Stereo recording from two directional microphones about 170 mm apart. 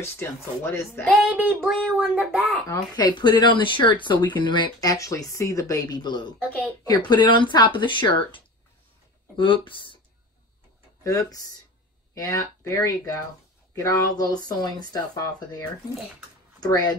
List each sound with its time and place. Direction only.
0.2 s speech: 15° left (ahead or behind)
1.2 s a sound: 5° right (ahead or behind)
2.7 s speech: 25° left (ahead or behind)
9.4 s speech: 30° left (ahead or behind)
11.1 s speech: 20° left (ahead or behind)
16.5 s speech: 20° left (ahead or behind)